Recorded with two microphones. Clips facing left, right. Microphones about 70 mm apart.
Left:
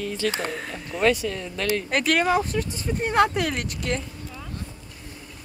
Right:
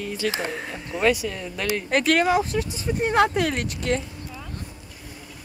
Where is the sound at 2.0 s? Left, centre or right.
Centre.